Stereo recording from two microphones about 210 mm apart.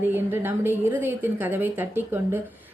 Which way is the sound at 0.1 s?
10° right (ahead or behind).